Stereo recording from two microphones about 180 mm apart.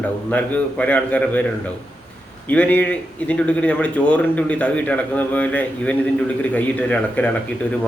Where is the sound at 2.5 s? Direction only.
10° left (ahead or behind).